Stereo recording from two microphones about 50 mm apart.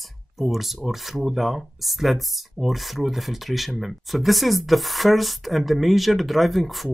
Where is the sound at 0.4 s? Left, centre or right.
Centre.